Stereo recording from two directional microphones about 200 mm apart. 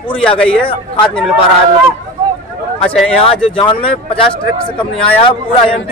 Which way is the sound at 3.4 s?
25° left (ahead or behind).